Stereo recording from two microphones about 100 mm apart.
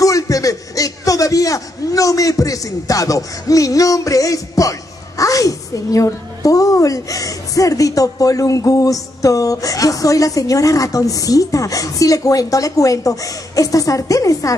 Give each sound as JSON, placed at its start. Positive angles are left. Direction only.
{"t": 0.0, "sound": "a man's voice", "side_deg": 35}